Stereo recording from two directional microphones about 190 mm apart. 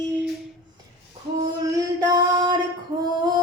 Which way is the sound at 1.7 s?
20° right (ahead or behind).